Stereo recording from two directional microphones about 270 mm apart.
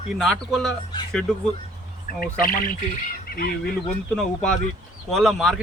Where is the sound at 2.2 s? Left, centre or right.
Left.